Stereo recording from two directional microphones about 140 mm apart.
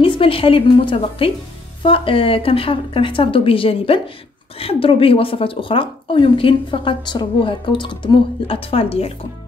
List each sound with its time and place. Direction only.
0.0 s speech: 40° left (ahead or behind)